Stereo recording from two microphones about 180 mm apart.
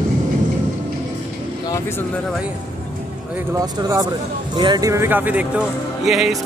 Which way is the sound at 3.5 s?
20° right (ahead or behind).